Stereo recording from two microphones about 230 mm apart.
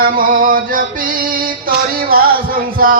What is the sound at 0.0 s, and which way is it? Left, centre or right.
Music, right.